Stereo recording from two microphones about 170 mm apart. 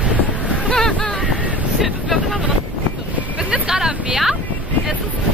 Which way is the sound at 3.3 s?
5° right (ahead or behind).